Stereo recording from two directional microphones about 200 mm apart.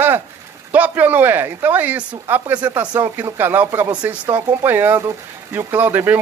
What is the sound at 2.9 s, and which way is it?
Speech, 20° right (ahead or behind).